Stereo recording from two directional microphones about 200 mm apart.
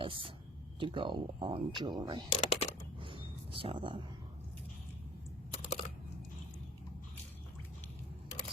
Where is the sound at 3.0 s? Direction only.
25° right (ahead or behind).